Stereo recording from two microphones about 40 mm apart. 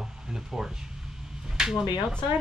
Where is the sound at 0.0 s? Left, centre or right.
Centre.